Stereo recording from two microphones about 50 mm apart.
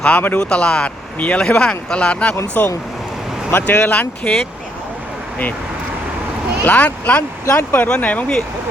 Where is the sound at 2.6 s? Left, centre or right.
Left.